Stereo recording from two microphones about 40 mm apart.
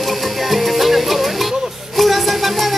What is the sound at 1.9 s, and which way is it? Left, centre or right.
Music, centre.